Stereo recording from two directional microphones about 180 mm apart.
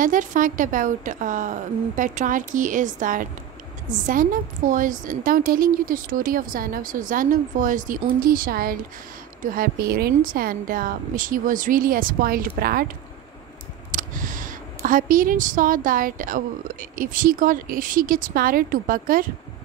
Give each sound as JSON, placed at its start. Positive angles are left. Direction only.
{"t": 0.0, "sound": "a woman's voice", "side_deg": -45}
{"t": 13.9, "sound": "a woman's voice", "side_deg": -45}